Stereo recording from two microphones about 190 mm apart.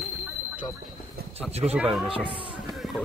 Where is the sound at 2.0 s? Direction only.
25° right (ahead or behind).